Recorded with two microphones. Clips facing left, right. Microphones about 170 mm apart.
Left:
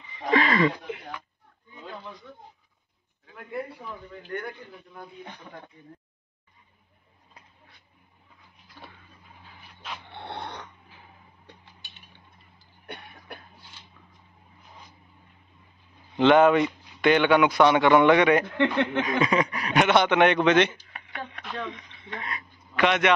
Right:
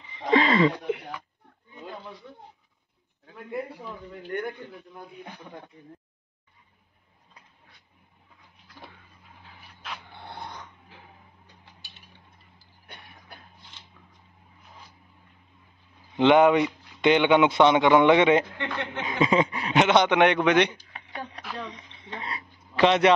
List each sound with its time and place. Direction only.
0.2 s a sound: 25° right (ahead or behind)
4.3 s a man's voice: 20° right (ahead or behind)
10.1 s dog: 70° left (ahead or behind)
12.8 s cough: 65° left (ahead or behind)
16.2 s speech: 15° right (ahead or behind)
18.6 s speech: 60° left (ahead or behind)
19.0 s a man's voice: 25° right (ahead or behind)
21.4 s a sound: centre (ahead or behind)
21.6 s speech: 30° right (ahead or behind)